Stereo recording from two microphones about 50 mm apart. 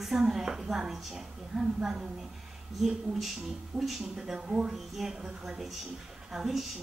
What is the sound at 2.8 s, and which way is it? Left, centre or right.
A woman's voice, centre.